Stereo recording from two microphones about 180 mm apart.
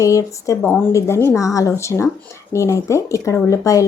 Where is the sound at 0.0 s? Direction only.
15° left (ahead or behind).